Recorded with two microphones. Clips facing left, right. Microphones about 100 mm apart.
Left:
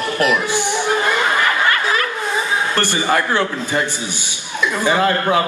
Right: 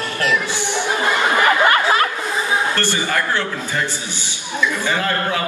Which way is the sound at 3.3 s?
15° left (ahead or behind).